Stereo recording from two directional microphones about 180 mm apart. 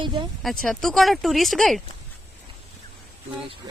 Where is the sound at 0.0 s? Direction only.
25° right (ahead or behind).